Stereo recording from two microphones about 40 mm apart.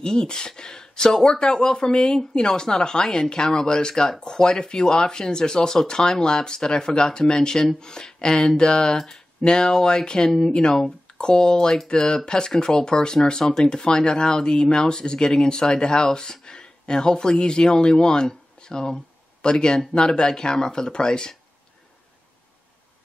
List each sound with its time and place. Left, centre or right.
0.0 s speech: left